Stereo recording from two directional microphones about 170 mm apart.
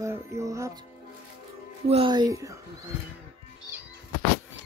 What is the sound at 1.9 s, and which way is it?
Speech, 30° right (ahead or behind).